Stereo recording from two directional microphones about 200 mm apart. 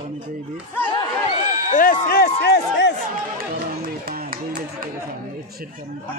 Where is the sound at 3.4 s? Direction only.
45° right (ahead or behind).